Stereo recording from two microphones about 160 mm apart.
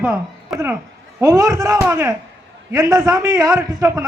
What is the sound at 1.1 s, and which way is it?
A man's voice, 20° right (ahead or behind).